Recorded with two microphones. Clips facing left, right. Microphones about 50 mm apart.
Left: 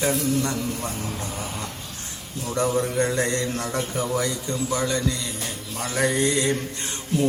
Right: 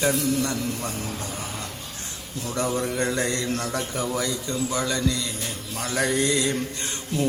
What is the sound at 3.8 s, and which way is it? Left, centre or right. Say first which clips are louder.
Mantra: left 2 dB; centre.